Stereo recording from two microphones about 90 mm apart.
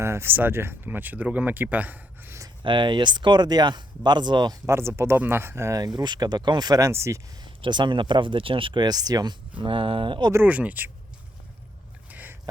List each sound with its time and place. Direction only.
0.0 s speech: 30° right (ahead or behind)
2.6 s speech: 60° right (ahead or behind)
4.6 s speech: 30° right (ahead or behind)
6.0 s speech: 50° right (ahead or behind)
6.9 s speech: 30° right (ahead or behind)
7.6 s speech: 60° right (ahead or behind)
9.6 s speech: 75° right (ahead or behind)
10.4 s speech: 15° right (ahead or behind)
12.1 s a sound: 20° right (ahead or behind)